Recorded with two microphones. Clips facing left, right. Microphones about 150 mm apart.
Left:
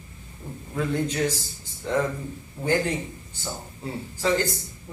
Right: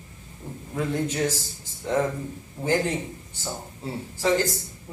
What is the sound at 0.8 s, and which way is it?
Speech, 15° right (ahead or behind).